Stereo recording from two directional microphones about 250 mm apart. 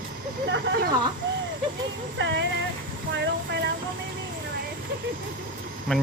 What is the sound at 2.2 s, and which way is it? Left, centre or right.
Speech, right.